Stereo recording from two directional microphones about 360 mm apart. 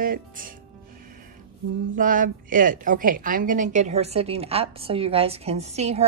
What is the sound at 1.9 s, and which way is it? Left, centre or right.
A woman's voice, right.